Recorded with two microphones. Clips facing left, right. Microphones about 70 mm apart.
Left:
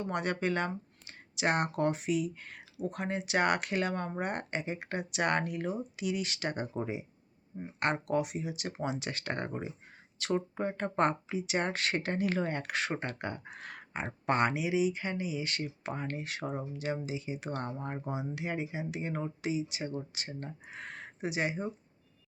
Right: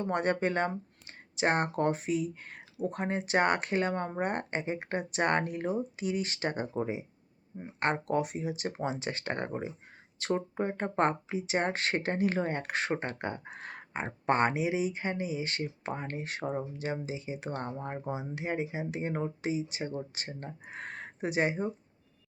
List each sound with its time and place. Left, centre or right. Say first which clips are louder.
0.0 s speech: right 3 dB; right
7.8 s speech: right 1 dB; right
10.5 s speech: right 1 dB; right
17.7 s speech: right 1 dB; centre
18.1 s speech: right 2 dB; right